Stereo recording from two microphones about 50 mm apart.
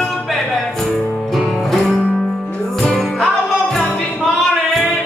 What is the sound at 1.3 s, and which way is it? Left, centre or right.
Music, centre.